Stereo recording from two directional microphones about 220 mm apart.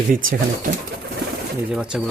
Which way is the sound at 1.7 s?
5° right (ahead or behind).